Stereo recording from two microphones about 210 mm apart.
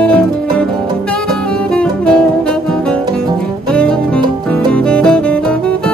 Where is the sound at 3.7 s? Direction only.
5° left (ahead or behind).